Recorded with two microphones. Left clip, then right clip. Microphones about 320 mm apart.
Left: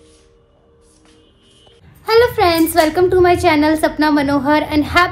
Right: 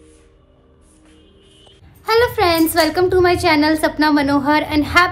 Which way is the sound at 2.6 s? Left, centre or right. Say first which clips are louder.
Left 2 dB; centre.